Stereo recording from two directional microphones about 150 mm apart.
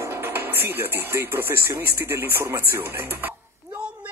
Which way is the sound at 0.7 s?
15° right (ahead or behind).